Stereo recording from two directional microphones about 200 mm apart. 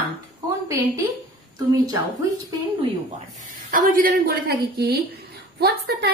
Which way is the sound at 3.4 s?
40° right (ahead or behind).